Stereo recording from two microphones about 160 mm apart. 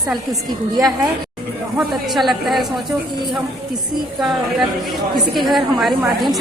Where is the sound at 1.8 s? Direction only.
Centre (ahead or behind).